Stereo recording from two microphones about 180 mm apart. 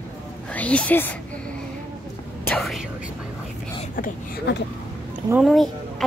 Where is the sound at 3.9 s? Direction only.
50° left (ahead or behind).